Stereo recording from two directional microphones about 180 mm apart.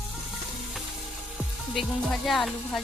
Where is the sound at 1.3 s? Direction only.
Centre (ahead or behind).